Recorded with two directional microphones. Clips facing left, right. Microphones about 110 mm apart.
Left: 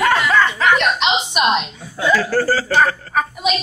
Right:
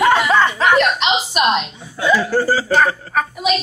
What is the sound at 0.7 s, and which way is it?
Speech, centre (ahead or behind).